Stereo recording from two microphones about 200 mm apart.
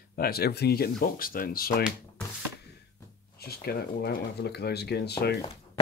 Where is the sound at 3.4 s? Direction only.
50° left (ahead or behind).